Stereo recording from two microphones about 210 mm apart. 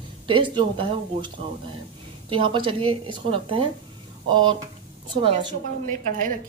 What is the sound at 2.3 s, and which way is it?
Speech, 25° right (ahead or behind).